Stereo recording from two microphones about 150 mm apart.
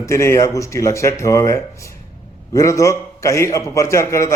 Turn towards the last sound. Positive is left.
turn(degrees=20)  # may be behind; listen again after turning